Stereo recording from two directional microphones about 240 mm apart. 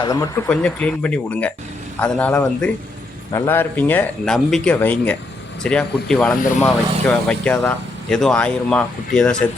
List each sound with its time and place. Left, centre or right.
0.0 s speech: centre
0.4 s speech: centre